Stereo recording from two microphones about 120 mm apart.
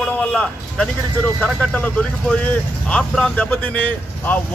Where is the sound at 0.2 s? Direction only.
10° left (ahead or behind).